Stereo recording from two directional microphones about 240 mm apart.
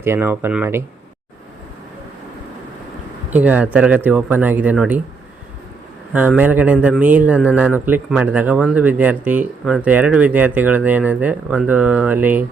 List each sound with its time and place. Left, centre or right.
0.0 s speech: centre
3.2 s speech: centre
6.1 s a man's voice: centre